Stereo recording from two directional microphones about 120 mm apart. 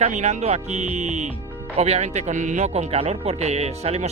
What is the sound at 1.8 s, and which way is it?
Speech, 65° right (ahead or behind).